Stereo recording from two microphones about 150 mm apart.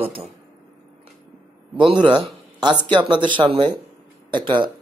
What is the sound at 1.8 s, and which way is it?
Speech, 30° right (ahead or behind).